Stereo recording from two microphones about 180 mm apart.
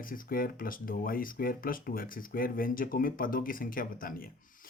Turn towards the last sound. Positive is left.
turn(degrees=50)  # may be behind; listen again after turning